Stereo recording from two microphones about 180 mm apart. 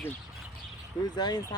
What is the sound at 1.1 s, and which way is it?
Speech, 25° left (ahead or behind).